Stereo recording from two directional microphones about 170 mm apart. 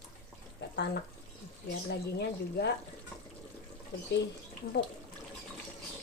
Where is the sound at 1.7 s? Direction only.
75° left (ahead or behind).